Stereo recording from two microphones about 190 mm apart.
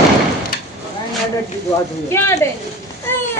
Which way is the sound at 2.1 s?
15° left (ahead or behind).